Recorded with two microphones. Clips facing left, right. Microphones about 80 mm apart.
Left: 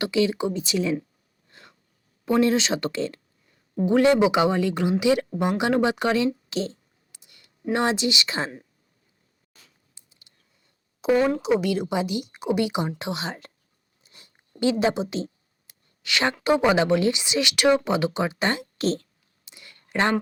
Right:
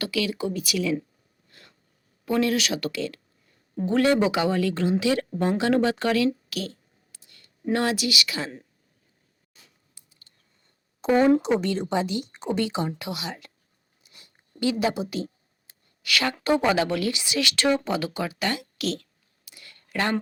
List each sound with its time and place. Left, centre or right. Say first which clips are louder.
0.0 s speech: left 4 dB; left
1.5 s a sound: left 3 dB; left
2.2 s speech: left 3 dB; left
3.8 s speech: left 3 dB; centre
9.9 s a sound: even; centre
11.4 s a woman's voice: left 2 dB; centre
11.9 s a woman's voice: even; centre
13.0 s speech: left 3 dB; left
14.0 s zipper: left 1 dB; left
16.0 s speech: left 2 dB; left
19.5 s a sound: left 2 dB; left